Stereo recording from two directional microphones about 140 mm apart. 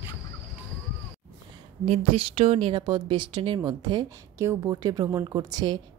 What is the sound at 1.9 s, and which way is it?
A woman's voice, 40° right (ahead or behind).